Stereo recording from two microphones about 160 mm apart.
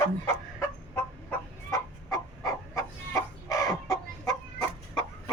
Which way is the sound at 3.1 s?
20° left (ahead or behind).